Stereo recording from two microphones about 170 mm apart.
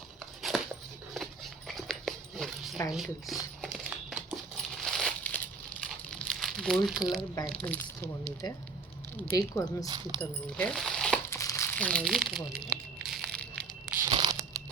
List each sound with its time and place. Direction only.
0.5 s dog: centre (ahead or behind)
2.9 s speech: centre (ahead or behind)
3.8 s crumpling: 10° right (ahead or behind)
4.5 s coin: 5° left (ahead or behind)
5.8 s crumpling: 5° left (ahead or behind)
7.6 s speech: 10° left (ahead or behind)
10.2 s speech: 5° left (ahead or behind)
11.3 s crumpling: 20° left (ahead or behind)
14.1 s crunch: 30° right (ahead or behind)